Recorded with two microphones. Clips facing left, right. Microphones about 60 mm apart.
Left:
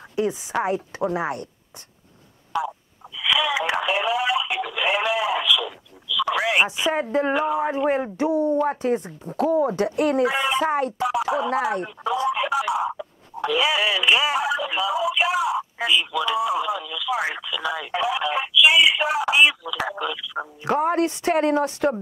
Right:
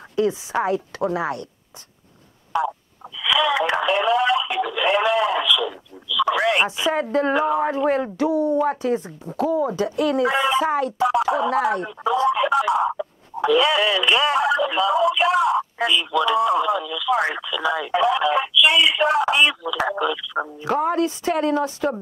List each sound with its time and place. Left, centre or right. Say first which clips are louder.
0.1 s a sound: right 3 dB; left
0.7 s speech: right 2 dB; left
3.2 s radio: right 3 dB; centre
6.8 s speech: right 1 dB; left
7.3 s speech: right 2 dB; centre
7.7 s speech: right 1 dB; left
10.2 s speech: right 2 dB; centre
10.7 s speech: right 1 dB; left
11.0 s speech: right 3 dB; centre
20.8 s speech: even; left